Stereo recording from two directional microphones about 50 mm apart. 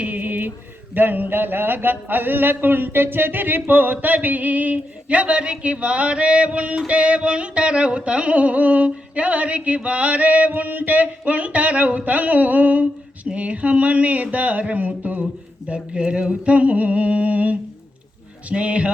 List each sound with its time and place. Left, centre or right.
0.0 s a sound: right
0.9 s speech: right
15.7 s speech: right